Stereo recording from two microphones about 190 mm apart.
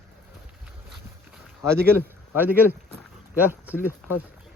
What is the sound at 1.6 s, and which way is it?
A man's voice, 15° right (ahead or behind).